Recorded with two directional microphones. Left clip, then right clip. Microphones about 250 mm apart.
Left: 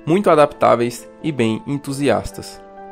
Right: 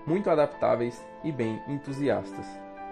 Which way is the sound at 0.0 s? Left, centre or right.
Centre.